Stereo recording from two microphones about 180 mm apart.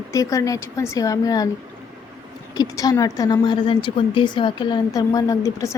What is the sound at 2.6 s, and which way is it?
Speech, 20° left (ahead or behind).